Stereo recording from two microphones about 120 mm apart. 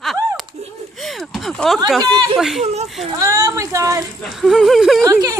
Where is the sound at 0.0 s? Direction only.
Centre (ahead or behind).